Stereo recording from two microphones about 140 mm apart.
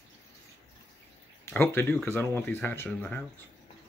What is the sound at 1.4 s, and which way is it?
Speech, 20° left (ahead or behind).